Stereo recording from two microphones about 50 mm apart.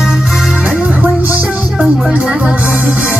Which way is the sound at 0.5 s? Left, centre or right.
Right.